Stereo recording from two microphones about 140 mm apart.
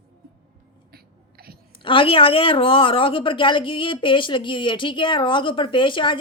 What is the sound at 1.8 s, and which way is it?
A woman's voice, 40° left (ahead or behind).